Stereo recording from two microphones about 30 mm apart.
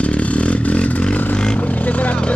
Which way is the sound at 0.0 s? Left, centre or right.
Left.